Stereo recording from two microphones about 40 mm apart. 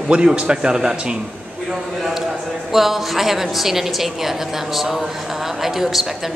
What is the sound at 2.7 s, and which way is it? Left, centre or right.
A woman's voice, centre.